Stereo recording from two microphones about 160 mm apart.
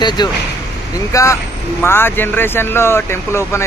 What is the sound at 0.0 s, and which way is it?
Speech, 25° left (ahead or behind).